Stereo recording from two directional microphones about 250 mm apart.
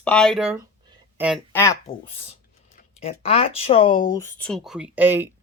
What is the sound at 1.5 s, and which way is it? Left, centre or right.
Speech, centre.